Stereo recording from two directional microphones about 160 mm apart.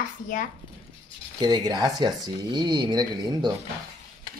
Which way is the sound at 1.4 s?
25° right (ahead or behind).